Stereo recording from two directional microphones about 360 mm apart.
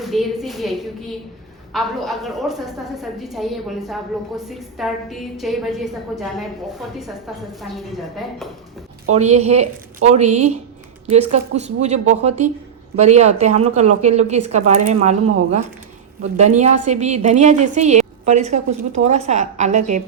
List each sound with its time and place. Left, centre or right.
0.0 s a woman's voice: centre
9.1 s a woman's voice: centre